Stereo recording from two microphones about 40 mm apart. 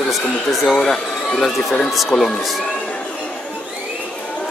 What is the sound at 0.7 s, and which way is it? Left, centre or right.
Speech, centre.